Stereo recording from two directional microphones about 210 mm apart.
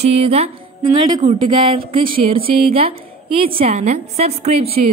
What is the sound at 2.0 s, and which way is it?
Speech, 45° right (ahead or behind).